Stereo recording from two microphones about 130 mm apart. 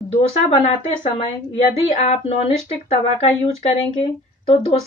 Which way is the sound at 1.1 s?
50° left (ahead or behind).